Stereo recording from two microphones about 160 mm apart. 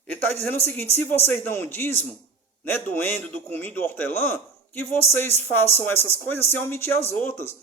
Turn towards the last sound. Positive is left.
turn(degrees=15)  # may be behind; listen again after turning